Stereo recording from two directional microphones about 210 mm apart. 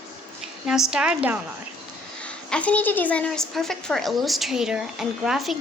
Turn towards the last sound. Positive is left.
turn(degrees=0)  # may be behind; listen again after turning